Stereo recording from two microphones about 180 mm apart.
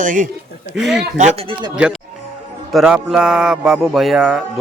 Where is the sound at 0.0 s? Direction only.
45° right (ahead or behind).